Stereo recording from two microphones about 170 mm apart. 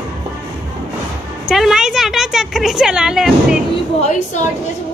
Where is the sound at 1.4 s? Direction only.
5° right (ahead or behind).